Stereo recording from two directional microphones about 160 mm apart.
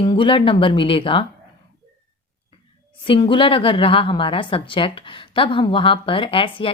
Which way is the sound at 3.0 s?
30° left (ahead or behind).